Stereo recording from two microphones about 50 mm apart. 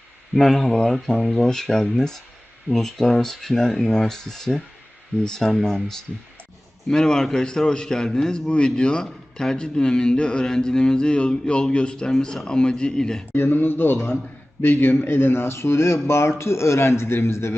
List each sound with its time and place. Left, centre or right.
0.3 s a man's voice: centre
13.3 s a man's voice: left